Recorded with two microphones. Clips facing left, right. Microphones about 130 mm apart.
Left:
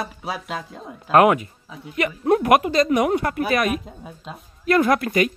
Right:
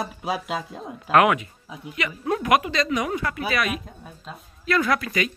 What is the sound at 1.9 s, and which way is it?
Speech, 50° left (ahead or behind).